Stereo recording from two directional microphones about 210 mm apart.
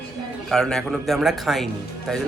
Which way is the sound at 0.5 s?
Centre (ahead or behind).